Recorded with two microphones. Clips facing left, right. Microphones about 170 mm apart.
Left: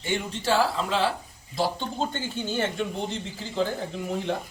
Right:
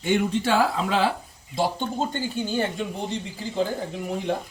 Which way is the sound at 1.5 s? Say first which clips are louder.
Right 2 dB; 20° right (ahead or behind).